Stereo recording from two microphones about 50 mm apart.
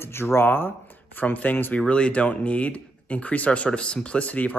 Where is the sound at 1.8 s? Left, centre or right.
Left.